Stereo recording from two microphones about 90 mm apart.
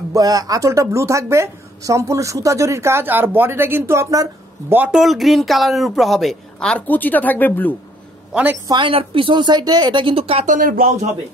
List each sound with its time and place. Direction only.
0.1 s speech: 40° right (ahead or behind)
4.6 s speech: 20° right (ahead or behind)
4.9 s speech: centre (ahead or behind)
6.9 s speech: 20° left (ahead or behind)
8.3 s a woman's voice: 15° right (ahead or behind)
8.6 s a woman's voice: 65° right (ahead or behind); by 10.3 s 80° right